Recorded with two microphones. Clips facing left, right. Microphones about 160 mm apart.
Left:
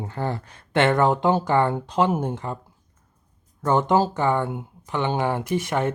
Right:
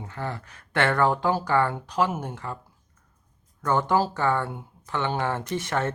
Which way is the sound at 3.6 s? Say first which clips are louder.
Left 3 dB; 20° left (ahead or behind).